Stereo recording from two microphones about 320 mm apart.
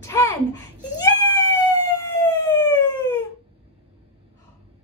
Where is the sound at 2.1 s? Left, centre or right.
Centre.